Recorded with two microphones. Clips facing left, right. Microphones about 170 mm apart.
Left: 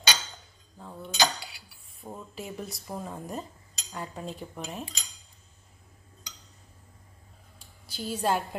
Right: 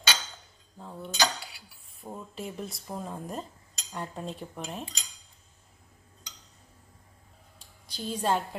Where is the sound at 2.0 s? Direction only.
Centre (ahead or behind).